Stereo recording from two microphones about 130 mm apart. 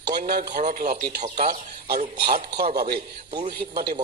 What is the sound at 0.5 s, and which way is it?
Speech, 90° right.